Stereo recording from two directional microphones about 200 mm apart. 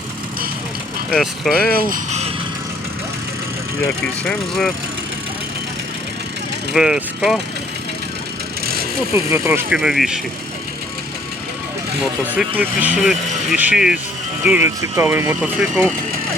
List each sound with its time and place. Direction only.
1.1 s speech: centre (ahead or behind)
1.9 s speech: 35° right (ahead or behind)
4.2 s speech: 5° left (ahead or behind)
6.7 s speech: 5° right (ahead or behind)
8.6 s vehicle: 50° right (ahead or behind)
9.1 s speech: 15° right (ahead or behind)
12.4 s speech: 10° right (ahead or behind)